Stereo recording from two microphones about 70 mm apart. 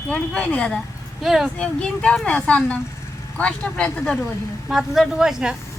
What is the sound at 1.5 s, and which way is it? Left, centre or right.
Speech, centre.